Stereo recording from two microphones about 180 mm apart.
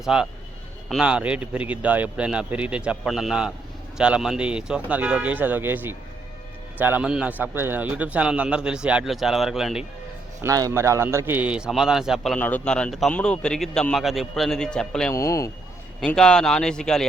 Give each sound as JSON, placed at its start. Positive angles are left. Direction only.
{"t": 0.0, "sound": "a man's voice", "side_deg": -5}
{"t": 10.4, "sound": "a man's voice", "side_deg": -15}
{"t": 15.1, "sound": "speech", "side_deg": 15}
{"t": 16.0, "sound": "a man's voice", "side_deg": 5}